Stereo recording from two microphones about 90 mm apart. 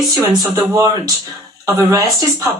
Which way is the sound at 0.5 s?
45° right (ahead or behind).